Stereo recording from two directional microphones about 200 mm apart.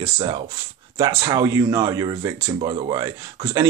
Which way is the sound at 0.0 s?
25° right (ahead or behind).